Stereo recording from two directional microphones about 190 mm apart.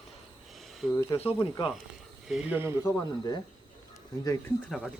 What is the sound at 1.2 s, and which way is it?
Speech, 30° left (ahead or behind).